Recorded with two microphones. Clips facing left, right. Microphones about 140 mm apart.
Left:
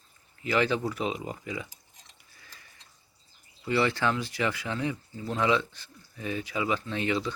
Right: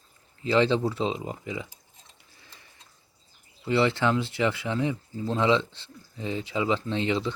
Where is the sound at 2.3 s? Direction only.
20° right (ahead or behind).